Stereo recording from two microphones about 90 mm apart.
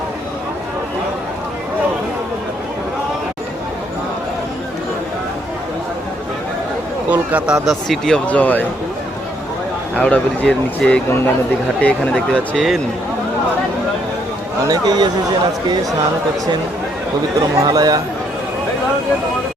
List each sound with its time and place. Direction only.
7.1 s speech: 15° right (ahead or behind); by 8.2 s 5° left (ahead or behind)
8.3 s speech: 15° left (ahead or behind)
10.0 s speech: 10° left (ahead or behind)
12.5 s speech: centre (ahead or behind)
14.7 s speech: 50° right (ahead or behind)
17.6 s speech: 45° right (ahead or behind)